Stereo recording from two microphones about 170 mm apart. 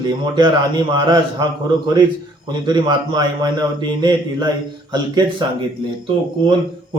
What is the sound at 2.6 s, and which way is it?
Speech, 25° right (ahead or behind).